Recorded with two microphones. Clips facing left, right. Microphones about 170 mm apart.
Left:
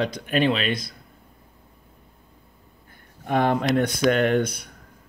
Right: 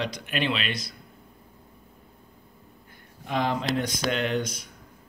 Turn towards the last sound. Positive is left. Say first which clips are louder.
# left 7 dB
turn(degrees=60)  # may be behind; listen again after turning